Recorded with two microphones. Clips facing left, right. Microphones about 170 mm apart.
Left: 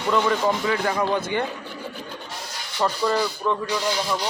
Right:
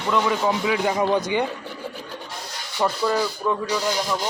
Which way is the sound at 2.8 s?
10° right (ahead or behind).